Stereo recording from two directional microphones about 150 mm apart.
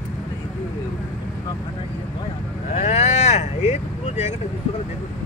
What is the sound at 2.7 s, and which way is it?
Speech, 45° left (ahead or behind).